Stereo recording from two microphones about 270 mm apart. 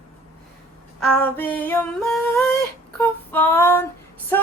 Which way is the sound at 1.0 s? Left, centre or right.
Centre.